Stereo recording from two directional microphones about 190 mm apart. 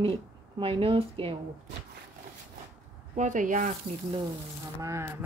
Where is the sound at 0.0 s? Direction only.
30° right (ahead or behind).